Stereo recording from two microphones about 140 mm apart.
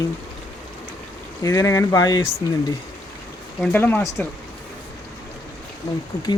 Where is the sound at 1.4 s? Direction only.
25° left (ahead or behind).